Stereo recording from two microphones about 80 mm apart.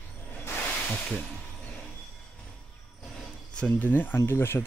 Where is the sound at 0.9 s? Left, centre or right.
Centre.